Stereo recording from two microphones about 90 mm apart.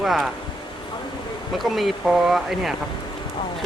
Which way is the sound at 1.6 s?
Centre (ahead or behind).